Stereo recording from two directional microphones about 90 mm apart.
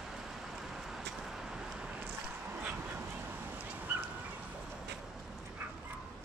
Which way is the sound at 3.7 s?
20° right (ahead or behind).